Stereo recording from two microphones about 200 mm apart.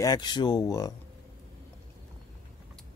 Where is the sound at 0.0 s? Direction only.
20° left (ahead or behind).